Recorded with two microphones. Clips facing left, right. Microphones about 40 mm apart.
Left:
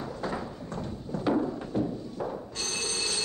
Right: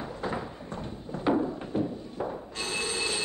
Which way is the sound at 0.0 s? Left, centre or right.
Right.